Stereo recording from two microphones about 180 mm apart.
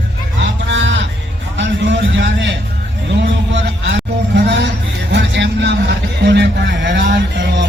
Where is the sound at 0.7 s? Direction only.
90° right.